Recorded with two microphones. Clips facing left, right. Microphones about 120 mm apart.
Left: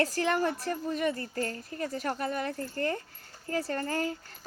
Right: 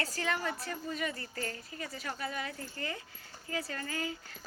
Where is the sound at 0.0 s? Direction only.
50° left (ahead or behind).